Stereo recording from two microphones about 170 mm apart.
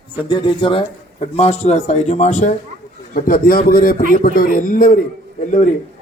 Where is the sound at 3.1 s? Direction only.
55° left (ahead or behind).